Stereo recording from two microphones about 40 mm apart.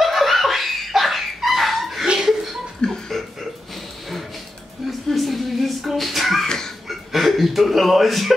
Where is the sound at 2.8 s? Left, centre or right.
Centre.